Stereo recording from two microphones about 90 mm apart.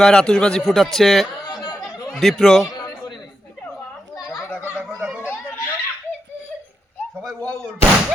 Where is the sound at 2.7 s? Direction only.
50° left (ahead or behind).